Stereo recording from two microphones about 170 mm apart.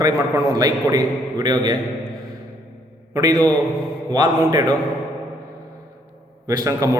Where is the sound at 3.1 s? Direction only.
20° right (ahead or behind).